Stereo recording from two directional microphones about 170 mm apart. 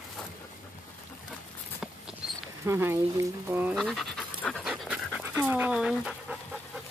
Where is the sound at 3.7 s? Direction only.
Centre (ahead or behind).